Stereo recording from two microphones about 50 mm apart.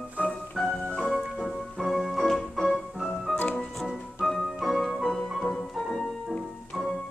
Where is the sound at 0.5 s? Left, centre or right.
Centre.